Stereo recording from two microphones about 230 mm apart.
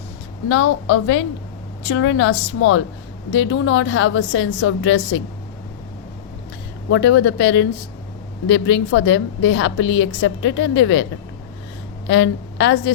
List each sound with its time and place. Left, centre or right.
0.4 s a woman's voice: left
6.9 s a woman's voice: left
12.0 s a woman's voice: left